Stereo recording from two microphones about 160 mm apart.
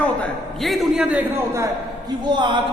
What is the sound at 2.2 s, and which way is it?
Speech, 30° right (ahead or behind).